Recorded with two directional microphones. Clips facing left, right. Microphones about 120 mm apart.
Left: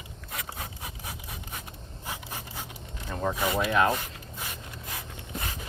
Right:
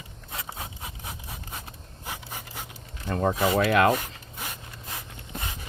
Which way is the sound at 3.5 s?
85° right.